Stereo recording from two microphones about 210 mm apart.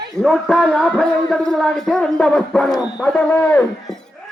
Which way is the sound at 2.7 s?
15° left (ahead or behind).